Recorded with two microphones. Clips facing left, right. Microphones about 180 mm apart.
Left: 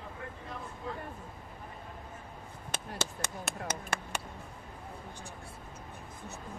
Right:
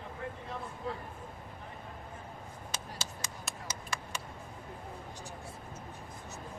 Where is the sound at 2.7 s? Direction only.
60° left (ahead or behind).